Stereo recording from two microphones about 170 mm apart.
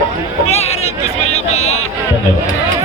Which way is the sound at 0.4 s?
40° left (ahead or behind).